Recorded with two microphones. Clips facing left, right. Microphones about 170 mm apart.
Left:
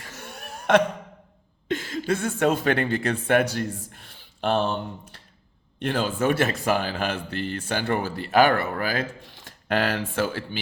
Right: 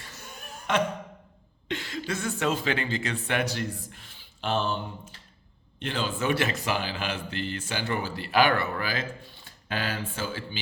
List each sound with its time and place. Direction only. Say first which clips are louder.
0.2 s chuckle: left 6 dB; 70° left (ahead or behind)
1.6 s a sound: left 5 dB; 45° left (ahead or behind)
2.1 s speech: left 5 dB; 55° left (ahead or behind)
9.2 s speech: left 5 dB; 80° left